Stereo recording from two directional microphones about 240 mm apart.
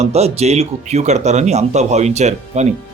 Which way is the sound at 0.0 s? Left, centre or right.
Right.